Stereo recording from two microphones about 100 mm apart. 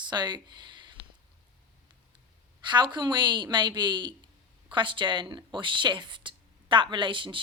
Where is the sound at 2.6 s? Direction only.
50° right (ahead or behind).